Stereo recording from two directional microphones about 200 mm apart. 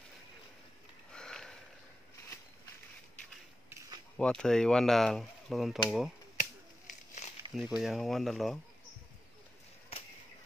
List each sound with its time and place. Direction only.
1.1 s sniff: 5° left (ahead or behind)
4.2 s speech: 5° left (ahead or behind)
7.2 s a sound: 35° left (ahead or behind)
7.5 s speech: centre (ahead or behind)